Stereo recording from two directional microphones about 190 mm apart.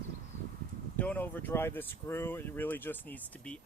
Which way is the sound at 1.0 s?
10° left (ahead or behind).